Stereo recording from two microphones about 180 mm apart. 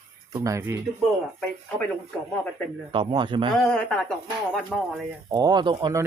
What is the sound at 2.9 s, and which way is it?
Speech, 30° right (ahead or behind).